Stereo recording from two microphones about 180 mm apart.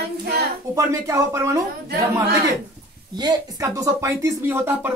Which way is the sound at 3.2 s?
20° right (ahead or behind).